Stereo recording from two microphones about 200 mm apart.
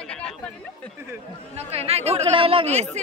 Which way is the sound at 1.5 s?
30° right (ahead or behind).